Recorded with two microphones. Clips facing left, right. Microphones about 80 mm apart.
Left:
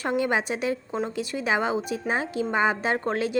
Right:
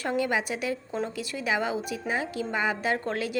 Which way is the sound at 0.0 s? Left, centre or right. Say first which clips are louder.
Left 2 dB; left.